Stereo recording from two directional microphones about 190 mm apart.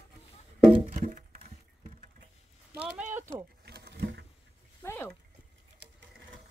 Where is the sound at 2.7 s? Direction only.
5° right (ahead or behind).